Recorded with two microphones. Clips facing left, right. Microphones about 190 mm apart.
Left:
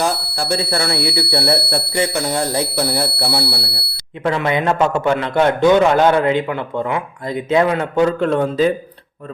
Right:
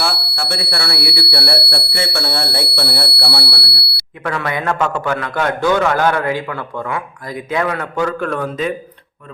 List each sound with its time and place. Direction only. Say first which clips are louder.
0.0 s speech: left 3 dB; 35° left (ahead or behind)
0.9 s a man's voice: left 3 dB; 20° left (ahead or behind)